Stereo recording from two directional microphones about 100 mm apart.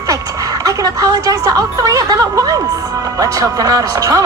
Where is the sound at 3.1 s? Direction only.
35° right (ahead or behind).